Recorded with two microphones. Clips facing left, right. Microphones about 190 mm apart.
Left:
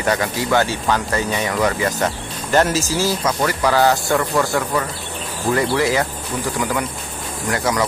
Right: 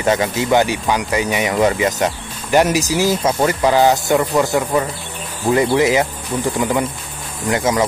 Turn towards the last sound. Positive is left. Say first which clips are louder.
# right 3 dB
turn(degrees=-25)  # may be behind; listen again after turning